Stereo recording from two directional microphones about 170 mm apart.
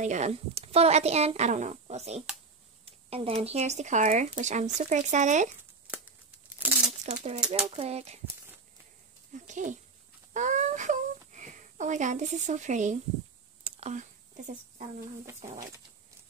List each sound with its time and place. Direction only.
0.0 s speech: 45° right (ahead or behind)
2.8 s a sound: 35° right (ahead or behind)
3.4 s speech: 40° right (ahead or behind)
6.6 s crumpling: 10° right (ahead or behind)
7.3 s speech: 5° right (ahead or behind)
7.7 s speech: 40° right (ahead or behind)
9.3 s speech: 45° right (ahead or behind)
13.7 s a sound: 40° right (ahead or behind)